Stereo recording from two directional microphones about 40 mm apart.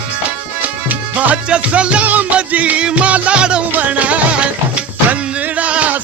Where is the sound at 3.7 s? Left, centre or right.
Right.